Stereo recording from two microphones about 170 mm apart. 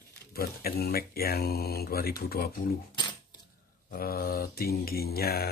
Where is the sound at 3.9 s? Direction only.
60° left (ahead or behind).